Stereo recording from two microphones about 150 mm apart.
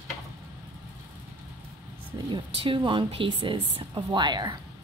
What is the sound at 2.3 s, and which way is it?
Speech, 35° right (ahead or behind).